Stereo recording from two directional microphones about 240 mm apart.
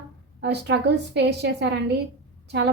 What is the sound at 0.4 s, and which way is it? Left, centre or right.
A woman's voice, right.